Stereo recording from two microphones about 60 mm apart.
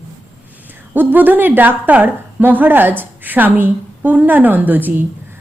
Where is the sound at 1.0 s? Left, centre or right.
Right.